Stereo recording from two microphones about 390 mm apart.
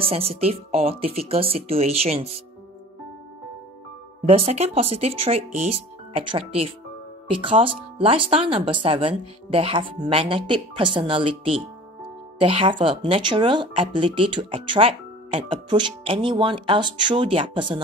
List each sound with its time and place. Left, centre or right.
0.0 s speech: centre
4.3 s speech: centre